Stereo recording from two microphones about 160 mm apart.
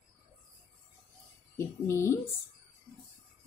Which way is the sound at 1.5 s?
15° left (ahead or behind).